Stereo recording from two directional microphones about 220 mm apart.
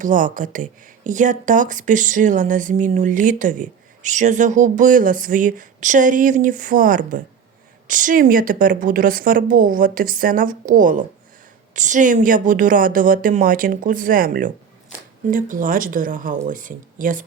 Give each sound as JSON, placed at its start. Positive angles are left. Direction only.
{"t": 0.0, "sound": "speech", "side_deg": -35}